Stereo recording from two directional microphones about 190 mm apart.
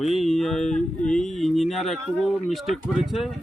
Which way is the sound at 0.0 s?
Centre (ahead or behind).